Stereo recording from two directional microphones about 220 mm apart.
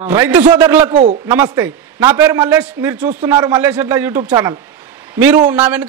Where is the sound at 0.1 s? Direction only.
10° right (ahead or behind).